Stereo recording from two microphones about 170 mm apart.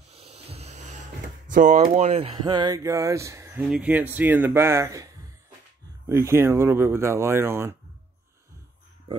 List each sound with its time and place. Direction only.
0.1 s a sound: 35° right (ahead or behind)
1.5 s speech: 50° right (ahead or behind); by 5.1 s 20° right (ahead or behind)
6.2 s speech: 15° right (ahead or behind)